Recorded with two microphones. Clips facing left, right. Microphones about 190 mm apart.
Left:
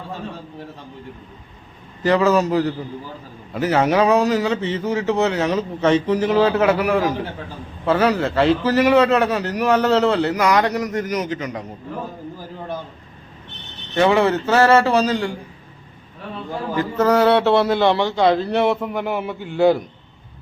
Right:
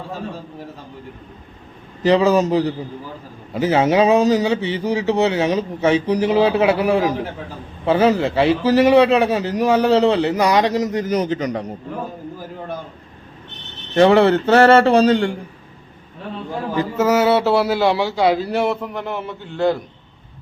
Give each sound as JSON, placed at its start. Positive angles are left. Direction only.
{"t": 2.0, "sound": "a man's voice", "side_deg": -15}
{"t": 14.2, "sound": "speech", "side_deg": -30}
{"t": 16.7, "sound": "a man's voice", "side_deg": -5}